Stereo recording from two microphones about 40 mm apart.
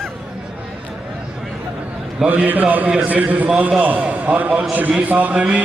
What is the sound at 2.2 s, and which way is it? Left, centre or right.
A man's voice, right.